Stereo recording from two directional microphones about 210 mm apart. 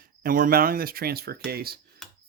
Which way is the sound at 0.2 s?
40° right (ahead or behind).